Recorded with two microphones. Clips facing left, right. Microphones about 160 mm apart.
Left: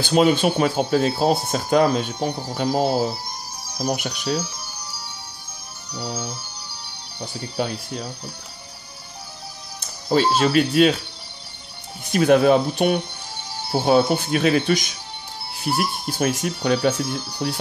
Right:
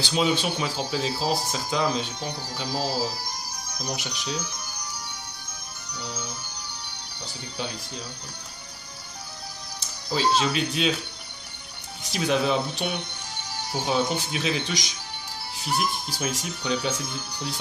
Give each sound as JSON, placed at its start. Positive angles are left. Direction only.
{"t": 0.0, "sound": "speech", "side_deg": 55}
{"t": 4.4, "sound": "music", "side_deg": 10}
{"t": 6.1, "sound": "music", "side_deg": 10}
{"t": 7.2, "sound": "speech", "side_deg": 55}
{"t": 9.8, "sound": "music", "side_deg": 55}
{"t": 10.4, "sound": "speech", "side_deg": 55}
{"t": 12.0, "sound": "speech", "side_deg": 55}
{"t": 15.7, "sound": "speech", "side_deg": 10}
{"t": 16.1, "sound": "speech", "side_deg": 55}